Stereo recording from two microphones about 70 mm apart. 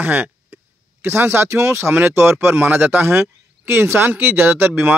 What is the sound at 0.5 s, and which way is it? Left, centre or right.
Speech, right.